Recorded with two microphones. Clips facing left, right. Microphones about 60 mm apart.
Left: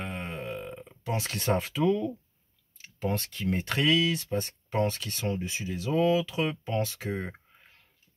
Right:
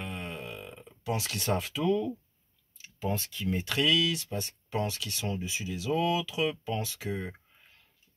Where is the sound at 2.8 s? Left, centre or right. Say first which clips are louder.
Left 2 dB; left.